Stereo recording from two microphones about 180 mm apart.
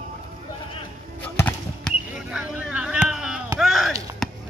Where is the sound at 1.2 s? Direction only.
10° left (ahead or behind).